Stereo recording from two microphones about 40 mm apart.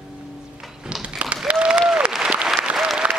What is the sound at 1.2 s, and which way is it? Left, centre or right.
Applause, right.